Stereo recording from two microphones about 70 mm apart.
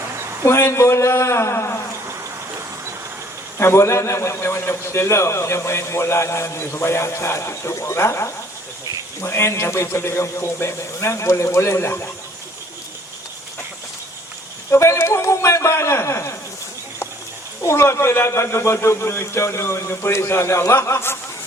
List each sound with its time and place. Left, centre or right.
0.4 s a man's voice: left
3.6 s a man's voice: left
14.7 s a man's voice: left
17.7 s a man's voice: left